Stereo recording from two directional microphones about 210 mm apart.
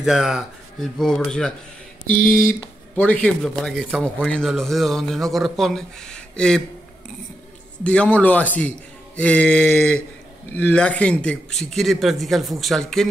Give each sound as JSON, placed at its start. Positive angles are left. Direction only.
{"t": 0.0, "sound": "a man's voice", "side_deg": -5}
{"t": 2.2, "sound": "speech", "side_deg": 40}
{"t": 3.0, "sound": "a man's voice", "side_deg": 5}
{"t": 7.8, "sound": "a man's voice", "side_deg": 5}